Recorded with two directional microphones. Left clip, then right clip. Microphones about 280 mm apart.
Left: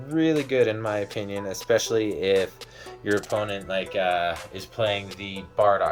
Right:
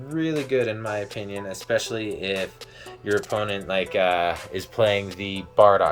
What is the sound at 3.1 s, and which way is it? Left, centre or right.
Speech, centre.